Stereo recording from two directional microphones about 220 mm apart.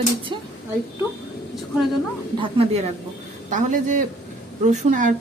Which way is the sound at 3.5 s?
35° right (ahead or behind).